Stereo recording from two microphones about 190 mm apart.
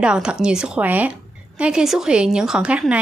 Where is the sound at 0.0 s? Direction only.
5° right (ahead or behind).